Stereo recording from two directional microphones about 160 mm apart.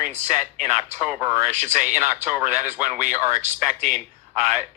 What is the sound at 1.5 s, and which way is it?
Speech, 50° right (ahead or behind).